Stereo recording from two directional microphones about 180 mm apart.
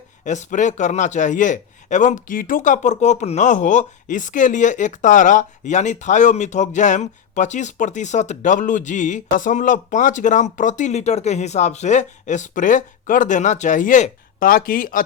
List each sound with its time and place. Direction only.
0.3 s a man's voice: 45° left (ahead or behind)